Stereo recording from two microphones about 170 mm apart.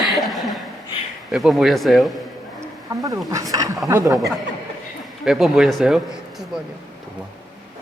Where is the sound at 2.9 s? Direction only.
20° right (ahead or behind).